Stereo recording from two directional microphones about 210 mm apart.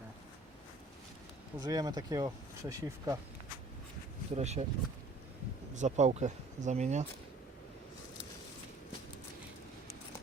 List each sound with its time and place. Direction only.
1.5 s speech: 15° right (ahead or behind)
4.4 s speech: 30° right (ahead or behind)
5.7 s speech: 35° right (ahead or behind)